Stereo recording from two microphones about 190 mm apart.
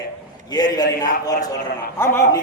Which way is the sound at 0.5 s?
20° left (ahead or behind).